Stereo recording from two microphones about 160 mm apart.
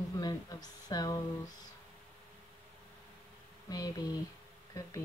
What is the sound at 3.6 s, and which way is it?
Speech, 25° left (ahead or behind).